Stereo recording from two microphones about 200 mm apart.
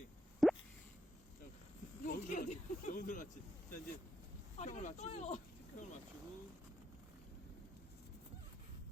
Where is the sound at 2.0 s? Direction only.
40° left (ahead or behind).